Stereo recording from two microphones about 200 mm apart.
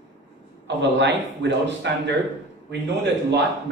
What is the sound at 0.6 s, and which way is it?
A man's voice, 60° right (ahead or behind).